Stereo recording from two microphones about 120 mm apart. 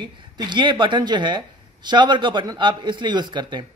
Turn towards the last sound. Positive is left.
turn(degrees=-40)  # may be behind; listen again after turning